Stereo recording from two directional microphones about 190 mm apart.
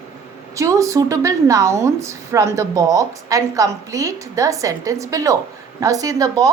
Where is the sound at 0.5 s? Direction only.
15° right (ahead or behind).